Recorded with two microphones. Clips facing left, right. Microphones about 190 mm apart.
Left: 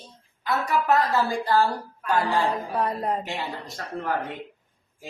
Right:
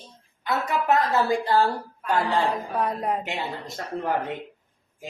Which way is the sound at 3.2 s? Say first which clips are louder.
Right 1 dB; 20° right (ahead or behind).